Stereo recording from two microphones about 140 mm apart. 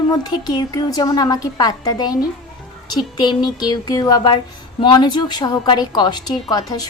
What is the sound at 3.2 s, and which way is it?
A woman's voice, 30° left (ahead or behind).